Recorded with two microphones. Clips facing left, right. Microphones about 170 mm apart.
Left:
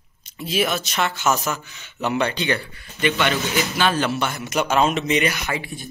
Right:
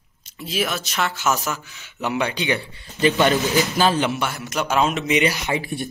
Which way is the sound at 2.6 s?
25° right (ahead or behind).